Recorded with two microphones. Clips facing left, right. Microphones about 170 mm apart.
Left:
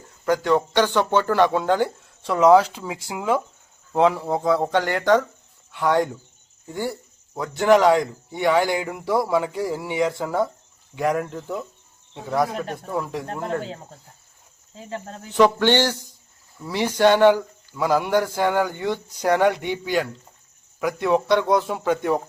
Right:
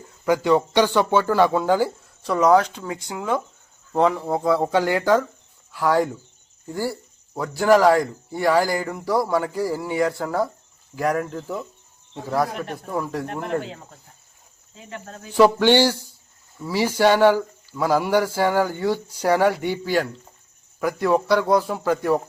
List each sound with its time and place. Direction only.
0.3 s a man's voice: 10° right (ahead or behind)
13.4 s speech: 35° left (ahead or behind)
15.4 s a man's voice: 5° right (ahead or behind)